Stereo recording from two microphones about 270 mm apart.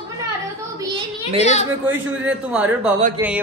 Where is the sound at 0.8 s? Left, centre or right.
Centre.